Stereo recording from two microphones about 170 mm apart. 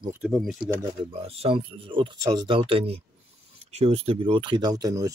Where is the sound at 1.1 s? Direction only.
35° right (ahead or behind).